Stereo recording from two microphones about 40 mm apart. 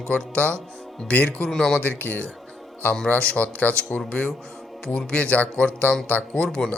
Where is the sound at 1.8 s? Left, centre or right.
Left.